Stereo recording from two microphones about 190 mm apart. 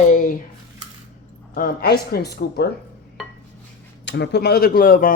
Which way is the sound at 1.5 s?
50° left (ahead or behind).